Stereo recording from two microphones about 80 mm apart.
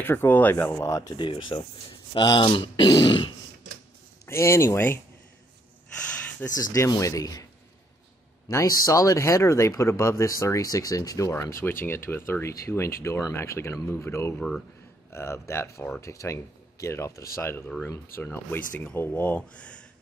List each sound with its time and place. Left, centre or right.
0.0 s speech: left
1.1 s speech: left
2.1 s speech: left
4.3 s speech: left
6.5 s a man's voice: left
8.5 s speech: left; by 19.8 s centre